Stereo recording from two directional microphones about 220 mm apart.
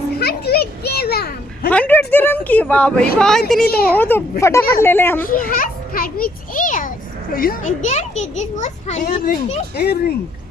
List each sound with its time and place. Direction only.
0.2 s a sound: 45° left (ahead or behind)
1.7 s a woman's voice: 10° left (ahead or behind)
3.6 s speech: 45° left (ahead or behind)
3.9 s speech: 10° left (ahead or behind)
5.3 s a child's voice: 40° left (ahead or behind)